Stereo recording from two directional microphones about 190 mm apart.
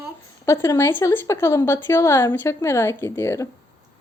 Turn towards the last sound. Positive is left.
turn(degrees=15)  # may be behind; listen again after turning